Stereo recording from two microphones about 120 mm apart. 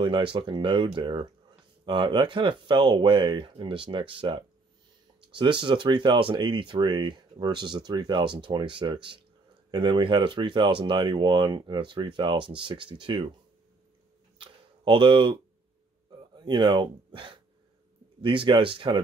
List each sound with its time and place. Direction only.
0.0 s speech: 45° right (ahead or behind)
14.4 s a sound: 45° right (ahead or behind)
16.2 s speech: 40° right (ahead or behind)